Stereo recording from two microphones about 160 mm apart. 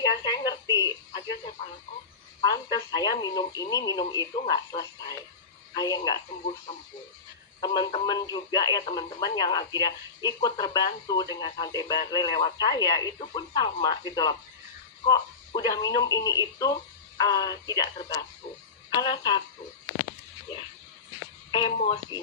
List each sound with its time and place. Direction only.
0.3 s speech: 25° left (ahead or behind)
2.4 s speech: 25° left (ahead or behind)
7.6 s speech: 25° left (ahead or behind)
21.5 s speech: 30° left (ahead or behind)